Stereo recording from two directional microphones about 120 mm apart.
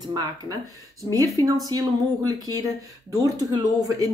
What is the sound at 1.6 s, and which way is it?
A woman's voice, 30° right (ahead or behind).